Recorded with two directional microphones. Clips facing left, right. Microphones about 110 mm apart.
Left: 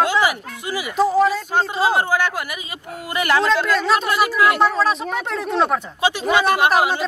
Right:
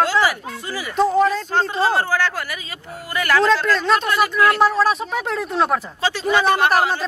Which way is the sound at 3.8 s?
5° left (ahead or behind).